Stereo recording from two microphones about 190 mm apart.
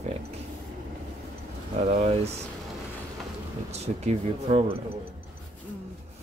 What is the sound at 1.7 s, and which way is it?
Speech, 35° right (ahead or behind).